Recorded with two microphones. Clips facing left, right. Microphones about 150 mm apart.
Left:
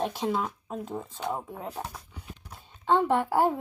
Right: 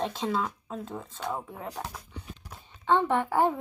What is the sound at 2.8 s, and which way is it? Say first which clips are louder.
Speech: left 1 dB; 10° left (ahead or behind).